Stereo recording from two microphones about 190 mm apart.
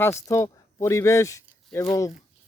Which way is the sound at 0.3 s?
15° left (ahead or behind).